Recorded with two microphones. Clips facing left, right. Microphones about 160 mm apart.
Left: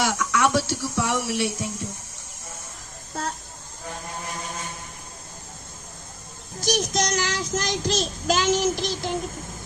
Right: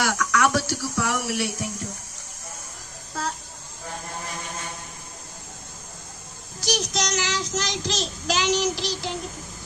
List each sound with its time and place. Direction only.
0.0 s speech: 25° left (ahead or behind)
6.6 s child singing: 50° left (ahead or behind)